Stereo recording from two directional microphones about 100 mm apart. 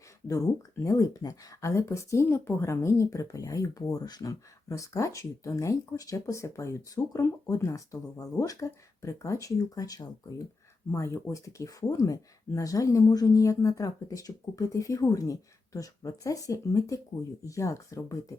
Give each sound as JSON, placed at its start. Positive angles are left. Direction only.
{"t": 0.3, "sound": "speech", "side_deg": 30}